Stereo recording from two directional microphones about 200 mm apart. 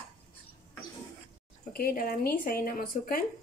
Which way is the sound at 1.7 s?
45° left (ahead or behind).